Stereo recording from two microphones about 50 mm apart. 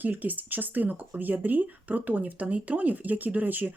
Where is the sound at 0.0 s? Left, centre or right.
Right.